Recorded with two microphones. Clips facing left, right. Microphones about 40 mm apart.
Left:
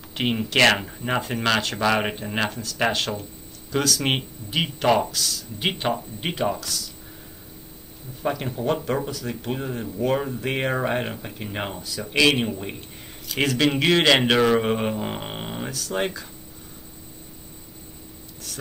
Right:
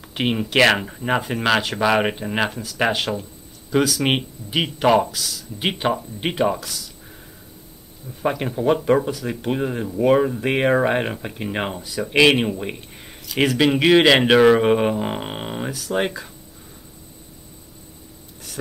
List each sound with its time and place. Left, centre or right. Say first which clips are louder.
0.0 s speech: right 2 dB; centre
8.2 s speech: right 4 dB; centre
13.4 s speech: right 4 dB; centre